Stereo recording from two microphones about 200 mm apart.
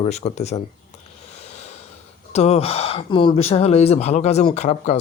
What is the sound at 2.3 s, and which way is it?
Speech, 30° left (ahead or behind).